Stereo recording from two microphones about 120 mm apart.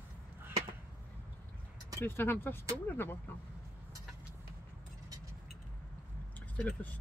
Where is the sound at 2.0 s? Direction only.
20° left (ahead or behind).